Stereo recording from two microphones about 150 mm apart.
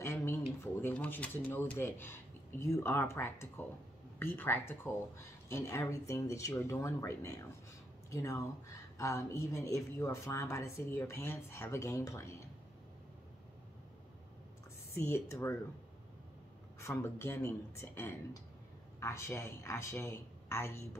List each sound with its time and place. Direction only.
0.0 s a sound: 20° left (ahead or behind)
0.8 s speech: 10° left (ahead or behind)
15.0 s speech: 20° left (ahead or behind)
16.8 s speech: 20° left (ahead or behind)